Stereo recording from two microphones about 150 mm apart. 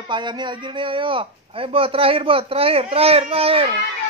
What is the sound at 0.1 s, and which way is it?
A man's voice, 30° right (ahead or behind).